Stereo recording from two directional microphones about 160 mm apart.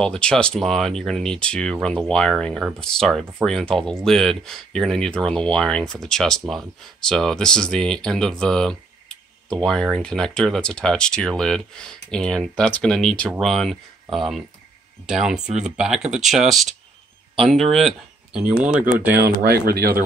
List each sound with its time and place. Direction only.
0.0 s speech: 5° left (ahead or behind)
19.1 s speech: 75° right (ahead or behind)